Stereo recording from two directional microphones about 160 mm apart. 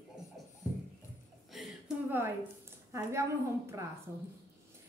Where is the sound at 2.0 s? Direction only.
15° right (ahead or behind).